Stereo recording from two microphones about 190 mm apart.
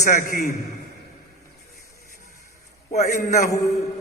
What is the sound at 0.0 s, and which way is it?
Speech, 45° left (ahead or behind).